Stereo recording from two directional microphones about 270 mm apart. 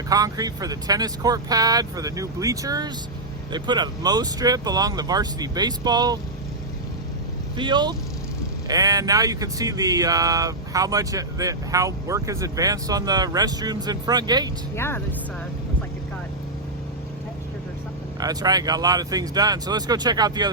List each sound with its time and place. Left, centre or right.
0.1 s speech: centre
7.5 s speech: centre
14.8 s speech: centre
18.2 s speech: centre